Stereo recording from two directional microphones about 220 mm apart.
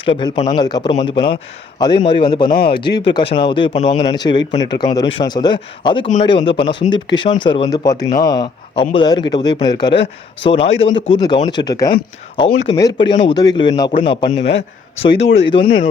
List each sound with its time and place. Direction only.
0.0 s speech: 20° left (ahead or behind)
2.5 s speech: 45° left (ahead or behind)
3.1 s speech: 20° left (ahead or behind)
10.9 s speech: 60° left (ahead or behind)
11.4 s speech: 20° left (ahead or behind)
15.2 s speech: 55° left (ahead or behind)
15.4 s speech: 20° left (ahead or behind)